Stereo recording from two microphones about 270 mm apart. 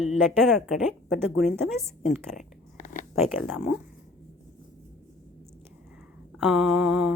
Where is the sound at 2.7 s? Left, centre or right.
Left.